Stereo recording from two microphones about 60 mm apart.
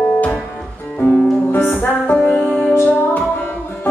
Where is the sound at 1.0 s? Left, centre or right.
Left.